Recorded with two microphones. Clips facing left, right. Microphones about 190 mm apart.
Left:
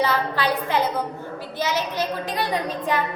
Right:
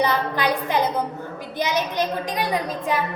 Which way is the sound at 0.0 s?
15° right (ahead or behind).